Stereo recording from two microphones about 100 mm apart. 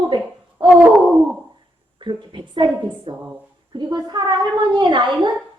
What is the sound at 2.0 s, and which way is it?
Speech, 50° right (ahead or behind).